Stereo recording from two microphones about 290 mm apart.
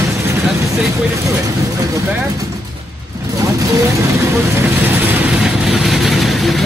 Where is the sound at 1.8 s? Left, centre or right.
Centre.